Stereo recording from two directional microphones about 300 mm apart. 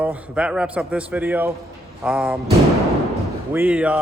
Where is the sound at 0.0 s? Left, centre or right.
Centre.